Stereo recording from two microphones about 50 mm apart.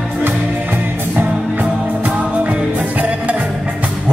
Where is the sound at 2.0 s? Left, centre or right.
Right.